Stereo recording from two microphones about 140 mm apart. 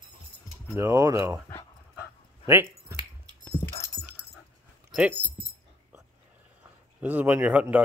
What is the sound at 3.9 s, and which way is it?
Dog, 25° left (ahead or behind).